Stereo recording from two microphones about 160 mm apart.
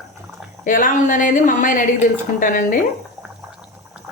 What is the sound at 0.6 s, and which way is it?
A woman's voice, 55° left (ahead or behind).